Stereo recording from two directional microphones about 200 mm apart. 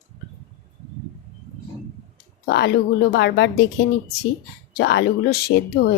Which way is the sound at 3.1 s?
60° left (ahead or behind).